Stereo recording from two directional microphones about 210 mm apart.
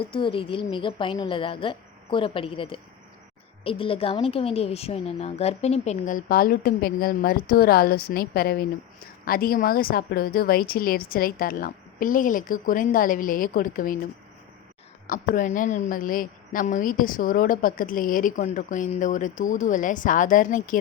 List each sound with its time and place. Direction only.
0.0 s a woman's voice: 25° left (ahead or behind); by 14.0 s 40° left (ahead or behind)
15.0 s a woman's voice: 40° left (ahead or behind)